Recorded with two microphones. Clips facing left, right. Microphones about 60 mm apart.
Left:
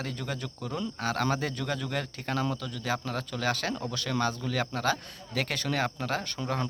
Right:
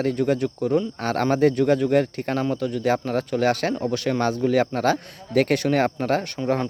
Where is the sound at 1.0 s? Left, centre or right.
Right.